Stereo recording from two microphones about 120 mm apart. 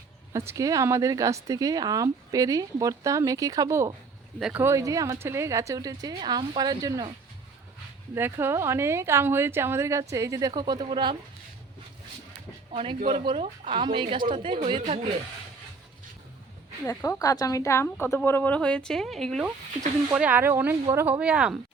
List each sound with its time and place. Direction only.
0.3 s speech: 25° right (ahead or behind)
8.1 s speech: 20° right (ahead or behind); by 11.2 s 40° right (ahead or behind)
12.7 s speech: 55° right (ahead or behind)
14.7 s a woman's voice: 55° right (ahead or behind)
16.8 s a woman's voice: 25° left (ahead or behind); by 19.5 s centre (ahead or behind)
20.1 s speech: 10° right (ahead or behind)